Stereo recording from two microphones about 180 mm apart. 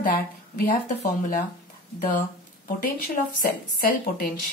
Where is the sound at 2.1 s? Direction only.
50° left (ahead or behind).